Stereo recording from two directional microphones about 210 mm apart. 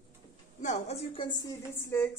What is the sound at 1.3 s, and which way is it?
Speech, 15° left (ahead or behind).